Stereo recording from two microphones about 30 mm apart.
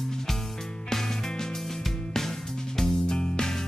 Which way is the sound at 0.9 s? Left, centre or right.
Centre.